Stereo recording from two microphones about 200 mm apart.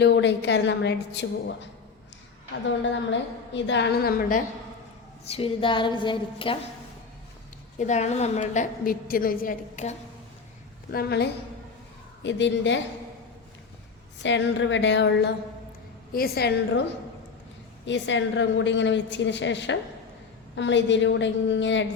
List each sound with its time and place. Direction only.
0.0 s a woman's voice: 60° left (ahead or behind)
2.9 s a woman's voice: 65° left (ahead or behind); by 4.4 s 45° left (ahead or behind)
5.3 s a woman's voice: 25° left (ahead or behind)
7.8 s a woman's voice: 35° left (ahead or behind)
10.9 s a woman's voice: 55° left (ahead or behind)
14.2 s a woman's voice: 65° left (ahead or behind)
16.1 s a woman's voice: 50° left (ahead or behind)
17.8 s a woman's voice: 65° left (ahead or behind)